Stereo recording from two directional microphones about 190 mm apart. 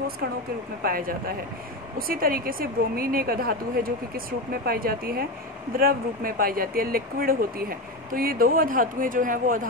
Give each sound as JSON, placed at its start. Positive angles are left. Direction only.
{"t": 0.8, "sound": "a woman's voice", "side_deg": -50}